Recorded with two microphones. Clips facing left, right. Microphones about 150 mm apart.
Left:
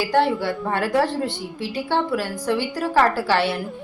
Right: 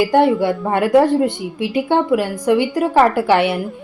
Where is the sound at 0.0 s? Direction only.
15° right (ahead or behind).